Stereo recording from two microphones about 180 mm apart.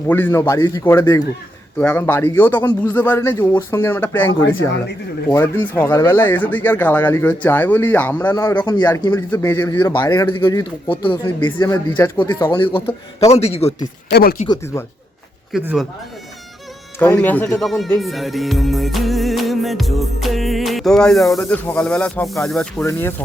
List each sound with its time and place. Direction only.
0.1 s speech: 10° left (ahead or behind)
5.3 s a man's voice: 15° left (ahead or behind); by 13.8 s 35° left (ahead or behind)
14.1 s speech: 60° left (ahead or behind)
15.5 s music: centre (ahead or behind)
17.0 s speech: 10° left (ahead or behind)
17.7 s music: centre (ahead or behind)
21.3 s speech: 10° left (ahead or behind)
22.4 s music: 5° left (ahead or behind)
22.8 s speech: 15° left (ahead or behind)